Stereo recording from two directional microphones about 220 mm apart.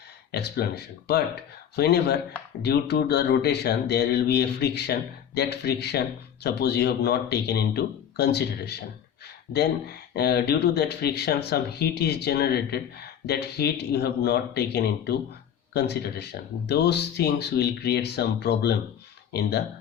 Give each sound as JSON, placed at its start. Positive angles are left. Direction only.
{"t": 0.3, "sound": "speech", "side_deg": 45}